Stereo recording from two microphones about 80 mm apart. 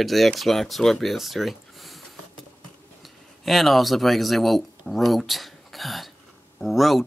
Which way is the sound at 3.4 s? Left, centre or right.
Centre.